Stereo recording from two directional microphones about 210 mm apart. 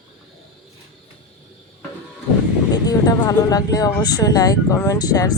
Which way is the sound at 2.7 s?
15° left (ahead or behind).